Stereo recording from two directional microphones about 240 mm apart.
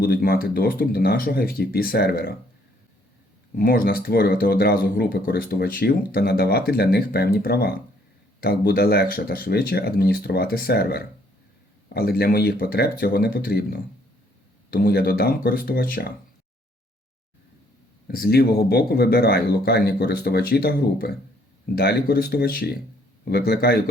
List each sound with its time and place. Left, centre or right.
0.0 s speech: left
3.5 s speech: left
18.1 s speech: left